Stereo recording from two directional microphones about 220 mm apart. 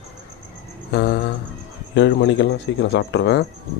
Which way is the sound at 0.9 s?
45° left (ahead or behind).